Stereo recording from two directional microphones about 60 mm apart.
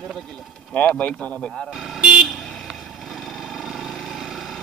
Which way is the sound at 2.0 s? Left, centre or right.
Centre.